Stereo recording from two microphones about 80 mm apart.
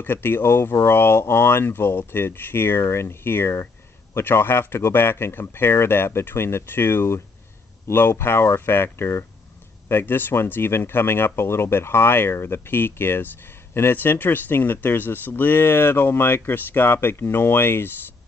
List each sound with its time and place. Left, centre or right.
0.0 s speech: left